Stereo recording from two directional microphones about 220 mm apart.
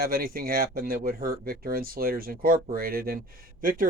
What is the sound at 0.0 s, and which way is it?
Speech, 40° right (ahead or behind).